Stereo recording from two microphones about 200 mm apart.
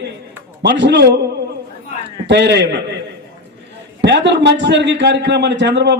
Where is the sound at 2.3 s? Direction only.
60° right (ahead or behind).